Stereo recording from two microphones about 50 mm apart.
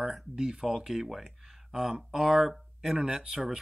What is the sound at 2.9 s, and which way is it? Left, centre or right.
Speech, centre.